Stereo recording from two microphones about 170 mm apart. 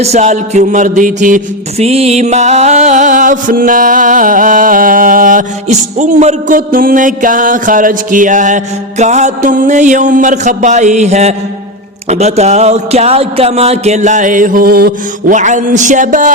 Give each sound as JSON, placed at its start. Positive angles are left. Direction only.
{"t": 0.0, "sound": "music", "side_deg": -40}
{"t": 1.8, "sound": "music", "side_deg": -35}
{"t": 15.4, "sound": "music", "side_deg": -45}